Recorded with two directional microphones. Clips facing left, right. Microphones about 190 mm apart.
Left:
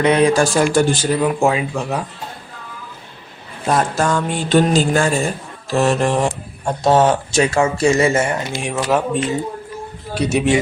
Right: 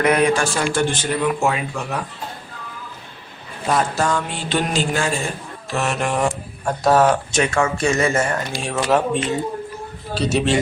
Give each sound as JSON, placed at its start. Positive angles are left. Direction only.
{"t": 0.0, "sound": "speech", "side_deg": 30}
{"t": 3.7, "sound": "mantra", "side_deg": 45}
{"t": 5.7, "sound": "speech", "side_deg": 35}
{"t": 8.7, "sound": "speech", "side_deg": 5}
{"t": 10.2, "sound": "a man's voice", "side_deg": 15}